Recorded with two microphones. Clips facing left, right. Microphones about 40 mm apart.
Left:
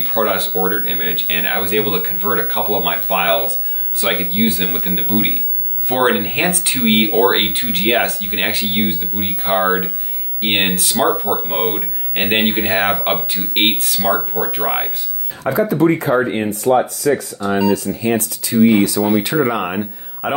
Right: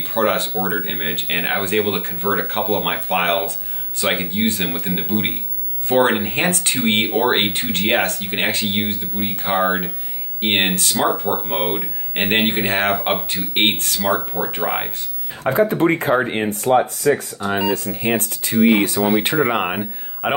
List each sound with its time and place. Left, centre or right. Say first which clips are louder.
0.0 s speech: left 1 dB; centre
15.4 s speech: left 1 dB; right
16.6 s speech: left 1 dB; right
17.9 s speech: left 2 dB; right
18.9 s speech: left 1 dB; right